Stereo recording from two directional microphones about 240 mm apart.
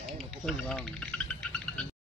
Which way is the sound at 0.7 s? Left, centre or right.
Centre.